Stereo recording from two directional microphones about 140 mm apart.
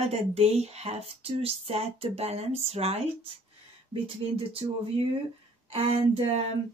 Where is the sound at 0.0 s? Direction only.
50° right (ahead or behind).